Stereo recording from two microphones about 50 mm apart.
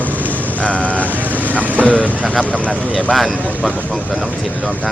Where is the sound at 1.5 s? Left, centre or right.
Right.